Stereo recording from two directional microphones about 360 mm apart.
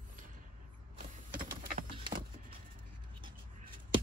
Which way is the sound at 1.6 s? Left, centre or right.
Right.